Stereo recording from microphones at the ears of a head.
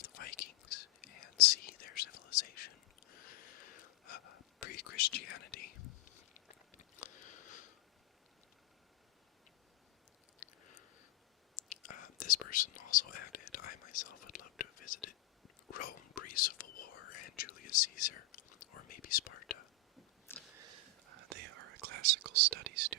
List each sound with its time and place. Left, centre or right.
0.0 s whispering: left
10.4 s a sound: left
11.5 s whispering: left
20.6 s whispering: right